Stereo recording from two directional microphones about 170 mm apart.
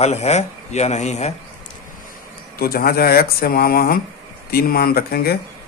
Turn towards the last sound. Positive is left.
turn(degrees=65)  # may be behind; listen again after turning